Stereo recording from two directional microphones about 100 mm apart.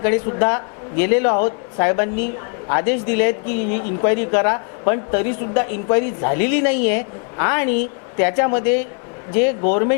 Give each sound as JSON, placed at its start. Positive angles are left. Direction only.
{"t": 0.0, "sound": "speech", "side_deg": 25}